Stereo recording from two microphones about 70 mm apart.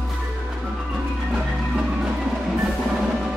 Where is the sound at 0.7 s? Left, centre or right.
Centre.